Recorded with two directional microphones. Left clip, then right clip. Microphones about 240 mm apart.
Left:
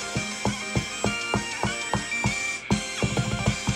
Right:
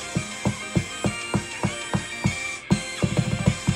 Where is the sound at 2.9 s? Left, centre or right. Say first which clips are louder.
Even; centre.